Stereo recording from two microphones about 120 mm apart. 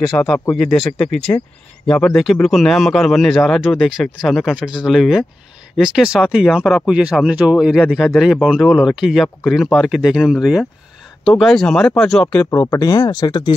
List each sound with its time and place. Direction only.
0.1 s a man's voice: 5° left (ahead or behind)
2.4 s a man's voice: centre (ahead or behind)
12.4 s speech: 30° left (ahead or behind)